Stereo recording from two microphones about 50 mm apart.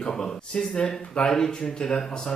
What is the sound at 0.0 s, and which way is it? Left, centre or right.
Speech, centre.